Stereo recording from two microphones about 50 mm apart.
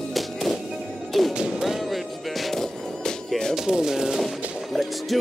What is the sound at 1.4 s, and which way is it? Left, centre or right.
Music, centre.